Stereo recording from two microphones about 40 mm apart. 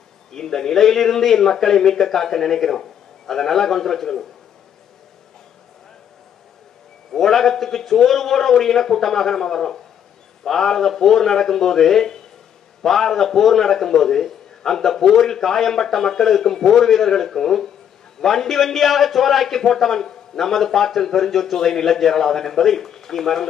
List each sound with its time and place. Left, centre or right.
0.3 s a man's voice: centre
7.1 s a man's voice: centre